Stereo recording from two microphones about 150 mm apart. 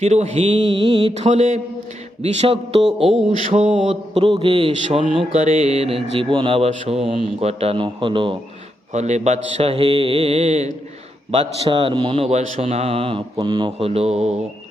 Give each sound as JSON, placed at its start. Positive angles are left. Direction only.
{"t": 0.0, "sound": "speech", "side_deg": -45}
{"t": 1.1, "sound": "a man's voice", "side_deg": -50}
{"t": 2.8, "sound": "speech", "side_deg": 0}
{"t": 3.2, "sound": "mantra", "side_deg": -55}
{"t": 3.8, "sound": "speech", "side_deg": -35}
{"t": 5.1, "sound": "speech", "side_deg": -45}
{"t": 8.9, "sound": "a man's voice", "side_deg": -50}
{"t": 13.7, "sound": "a man's voice", "side_deg": -40}